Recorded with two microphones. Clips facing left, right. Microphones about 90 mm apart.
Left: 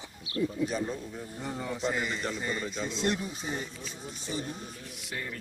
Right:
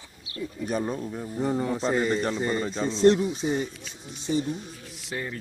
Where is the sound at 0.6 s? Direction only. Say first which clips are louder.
Right 3 dB; 50° right (ahead or behind).